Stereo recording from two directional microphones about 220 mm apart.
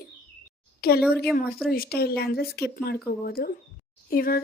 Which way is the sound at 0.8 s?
45° left (ahead or behind).